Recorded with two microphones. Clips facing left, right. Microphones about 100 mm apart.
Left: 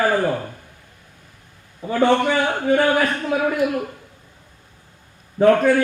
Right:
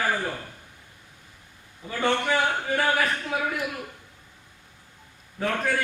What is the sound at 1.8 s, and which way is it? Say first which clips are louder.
Speech: left 9 dB; 55° left (ahead or behind).